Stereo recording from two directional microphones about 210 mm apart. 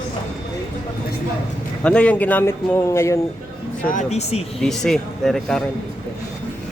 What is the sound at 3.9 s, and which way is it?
Speech, 35° left (ahead or behind).